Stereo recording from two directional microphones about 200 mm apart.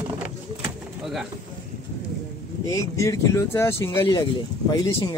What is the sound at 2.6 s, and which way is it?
Speech, 15° left (ahead or behind).